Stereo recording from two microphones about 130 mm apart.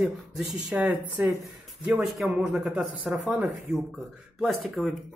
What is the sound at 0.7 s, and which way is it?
Speech, 10° right (ahead or behind).